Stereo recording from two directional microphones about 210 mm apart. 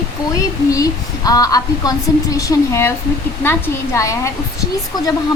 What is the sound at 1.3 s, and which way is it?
Speech, 15° left (ahead or behind).